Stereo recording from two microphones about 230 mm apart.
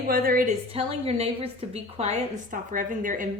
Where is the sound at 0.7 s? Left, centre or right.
Right.